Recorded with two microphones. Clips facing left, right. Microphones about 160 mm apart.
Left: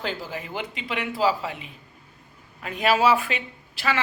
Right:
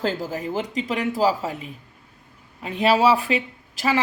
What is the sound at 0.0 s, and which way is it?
Speech, 40° right (ahead or behind).